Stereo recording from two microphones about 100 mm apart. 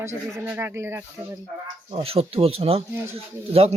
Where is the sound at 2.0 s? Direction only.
75° right (ahead or behind).